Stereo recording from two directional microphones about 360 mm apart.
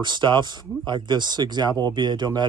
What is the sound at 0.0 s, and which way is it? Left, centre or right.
Speech, centre.